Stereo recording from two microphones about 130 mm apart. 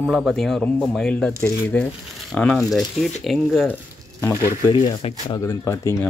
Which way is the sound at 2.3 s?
5° left (ahead or behind).